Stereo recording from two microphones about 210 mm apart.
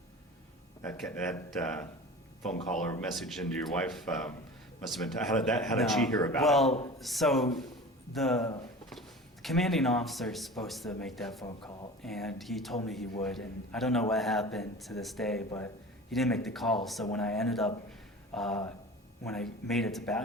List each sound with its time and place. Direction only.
0.8 s a man's voice: 5° left (ahead or behind)
2.6 s speech: 35° left (ahead or behind)
3.2 s a man's voice: centre (ahead or behind)